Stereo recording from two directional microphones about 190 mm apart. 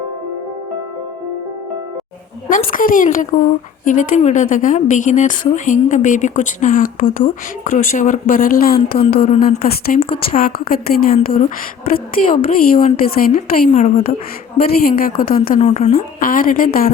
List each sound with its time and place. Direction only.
2.7 s a woman's voice: 45° left (ahead or behind)
9.2 s speech: 35° left (ahead or behind)
9.6 s a woman's voice: 50° left (ahead or behind); by 14.2 s 35° left (ahead or behind)
14.8 s a woman's voice: 50° left (ahead or behind)
15.4 s a woman's voice: 40° left (ahead or behind)